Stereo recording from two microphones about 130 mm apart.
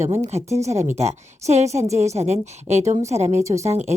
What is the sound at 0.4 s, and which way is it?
Speech, 25° right (ahead or behind).